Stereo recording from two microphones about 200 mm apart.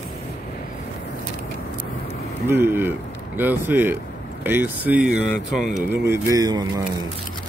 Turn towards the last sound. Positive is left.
turn(degrees=-20)  # may be behind; listen again after turning